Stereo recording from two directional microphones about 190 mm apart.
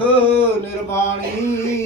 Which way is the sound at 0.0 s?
10° left (ahead or behind).